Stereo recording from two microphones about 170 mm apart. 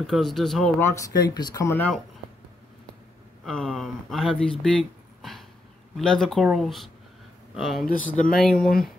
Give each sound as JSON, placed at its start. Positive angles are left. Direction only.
{"t": 0.0, "sound": "speech", "side_deg": 0}
{"t": 0.7, "sound": "speech", "side_deg": 20}
{"t": 3.4, "sound": "speech", "side_deg": 0}
{"t": 5.9, "sound": "speech", "side_deg": 5}